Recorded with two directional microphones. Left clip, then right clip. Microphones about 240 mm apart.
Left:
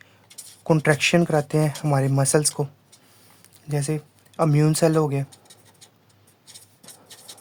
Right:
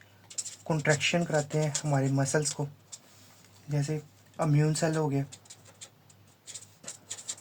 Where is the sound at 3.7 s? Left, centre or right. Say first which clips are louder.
Left 7 dB; left.